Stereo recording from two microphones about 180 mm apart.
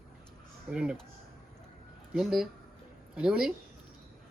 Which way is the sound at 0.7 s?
5° right (ahead or behind).